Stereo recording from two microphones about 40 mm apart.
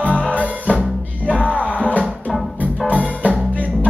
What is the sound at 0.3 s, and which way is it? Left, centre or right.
Music, left.